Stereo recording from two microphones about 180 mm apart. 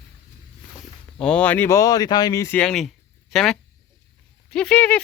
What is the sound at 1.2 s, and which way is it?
Speech, 5° left (ahead or behind).